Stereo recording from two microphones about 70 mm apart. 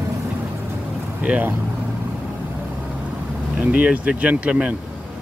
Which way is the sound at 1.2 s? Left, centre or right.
Right.